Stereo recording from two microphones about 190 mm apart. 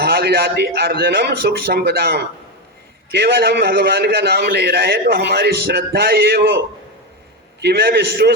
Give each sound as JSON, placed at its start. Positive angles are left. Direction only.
{"t": 0.0, "sound": "a man's voice", "side_deg": -55}
{"t": 7.6, "sound": "a man's voice", "side_deg": -55}